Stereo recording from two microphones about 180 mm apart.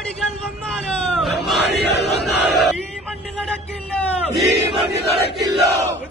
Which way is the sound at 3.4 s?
5° left (ahead or behind).